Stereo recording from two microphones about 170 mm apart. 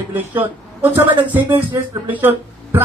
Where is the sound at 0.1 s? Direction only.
10° right (ahead or behind).